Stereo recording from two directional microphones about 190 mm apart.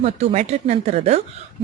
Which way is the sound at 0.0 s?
35° right (ahead or behind).